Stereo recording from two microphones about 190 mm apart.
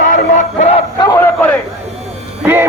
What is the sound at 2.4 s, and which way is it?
Speech, 10° right (ahead or behind).